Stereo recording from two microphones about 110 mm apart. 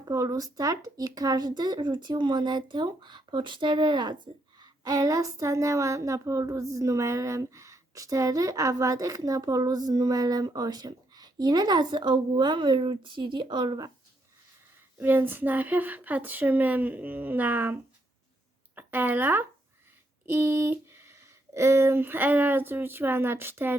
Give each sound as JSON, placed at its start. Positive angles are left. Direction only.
{"t": 0.1, "sound": "speech", "side_deg": -30}
{"t": 14.9, "sound": "speech", "side_deg": -20}
{"t": 18.8, "sound": "speech", "side_deg": -20}